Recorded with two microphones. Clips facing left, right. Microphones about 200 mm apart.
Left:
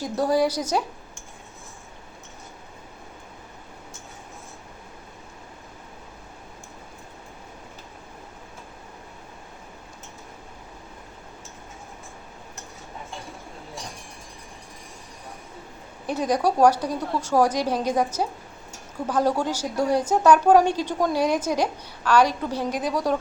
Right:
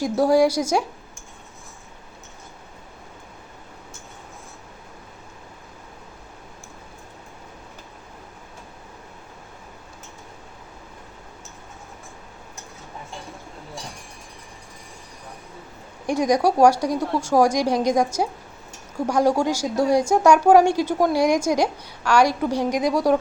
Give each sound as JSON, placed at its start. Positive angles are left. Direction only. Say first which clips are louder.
{"t": 0.0, "sound": "speech", "louder": "right 5 dB", "side_deg": -10}
{"t": 16.0, "sound": "a woman's voice", "louder": "right 4 dB", "side_deg": -10}